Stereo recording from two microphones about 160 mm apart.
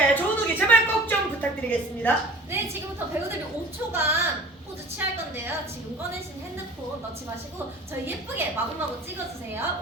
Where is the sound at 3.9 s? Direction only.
15° right (ahead or behind).